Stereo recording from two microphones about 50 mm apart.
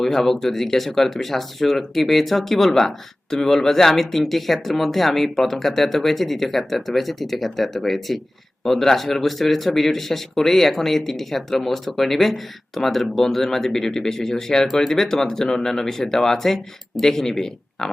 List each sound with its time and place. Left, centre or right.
0.0 s speech: centre